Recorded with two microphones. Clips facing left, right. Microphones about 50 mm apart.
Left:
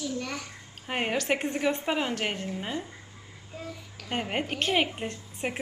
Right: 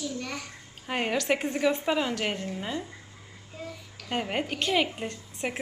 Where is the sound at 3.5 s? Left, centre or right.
Centre.